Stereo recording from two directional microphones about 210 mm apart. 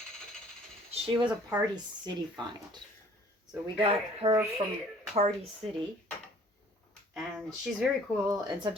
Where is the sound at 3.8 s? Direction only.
25° right (ahead or behind).